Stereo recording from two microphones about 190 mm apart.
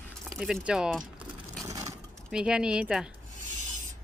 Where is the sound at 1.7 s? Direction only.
15° right (ahead or behind).